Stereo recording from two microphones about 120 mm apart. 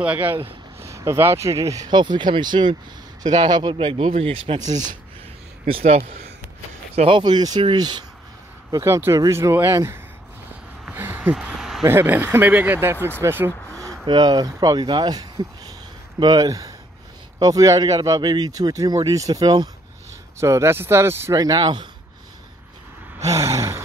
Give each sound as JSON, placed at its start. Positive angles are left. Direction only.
{"t": 0.0, "sound": "speech", "side_deg": -15}
{"t": 0.7, "sound": "speech", "side_deg": -25}
{"t": 3.7, "sound": "speech", "side_deg": -50}
{"t": 5.7, "sound": "speech", "side_deg": -55}
{"t": 7.1, "sound": "speech", "side_deg": -40}
{"t": 8.7, "sound": "speech", "side_deg": -25}
{"t": 10.9, "sound": "a sound", "side_deg": -15}
{"t": 11.8, "sound": "speech", "side_deg": -20}
{"t": 14.0, "sound": "speech", "side_deg": -35}
{"t": 21.4, "sound": "speech", "side_deg": -30}
{"t": 23.2, "sound": "sigh", "side_deg": -25}